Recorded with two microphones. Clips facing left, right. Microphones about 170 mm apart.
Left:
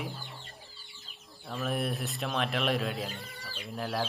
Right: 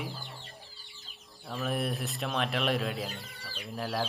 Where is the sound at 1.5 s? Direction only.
Centre (ahead or behind).